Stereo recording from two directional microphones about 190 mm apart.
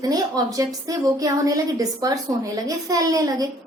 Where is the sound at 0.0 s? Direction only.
20° right (ahead or behind).